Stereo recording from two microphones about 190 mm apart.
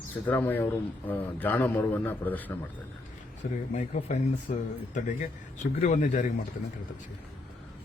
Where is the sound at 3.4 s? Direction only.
45° left (ahead or behind).